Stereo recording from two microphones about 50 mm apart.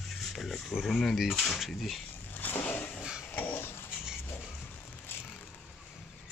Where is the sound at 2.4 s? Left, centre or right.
Left.